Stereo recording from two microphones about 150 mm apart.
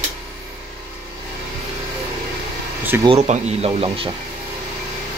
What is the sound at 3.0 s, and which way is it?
Speech, 45° right (ahead or behind).